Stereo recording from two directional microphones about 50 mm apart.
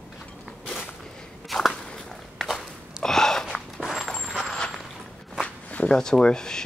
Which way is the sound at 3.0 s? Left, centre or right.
Centre.